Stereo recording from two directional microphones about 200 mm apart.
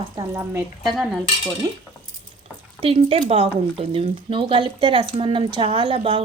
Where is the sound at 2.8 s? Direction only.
30° right (ahead or behind).